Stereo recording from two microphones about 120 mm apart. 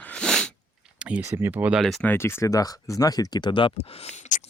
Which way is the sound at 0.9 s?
10° right (ahead or behind).